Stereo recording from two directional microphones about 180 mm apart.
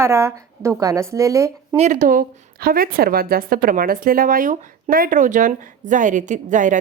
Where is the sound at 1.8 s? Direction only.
40° right (ahead or behind).